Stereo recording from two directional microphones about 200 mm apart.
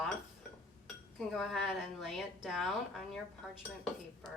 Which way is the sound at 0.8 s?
Centre (ahead or behind).